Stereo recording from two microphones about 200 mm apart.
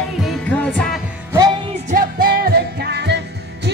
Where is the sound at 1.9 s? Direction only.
45° right (ahead or behind).